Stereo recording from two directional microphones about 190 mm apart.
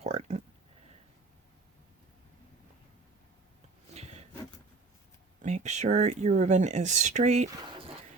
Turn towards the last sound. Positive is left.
turn(degrees=-40)  # may be behind; listen again after turning